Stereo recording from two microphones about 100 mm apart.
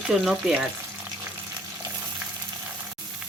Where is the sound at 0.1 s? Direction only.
5° right (ahead or behind).